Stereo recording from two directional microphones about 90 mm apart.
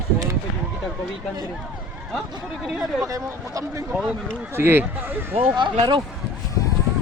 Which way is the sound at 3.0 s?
40° right (ahead or behind).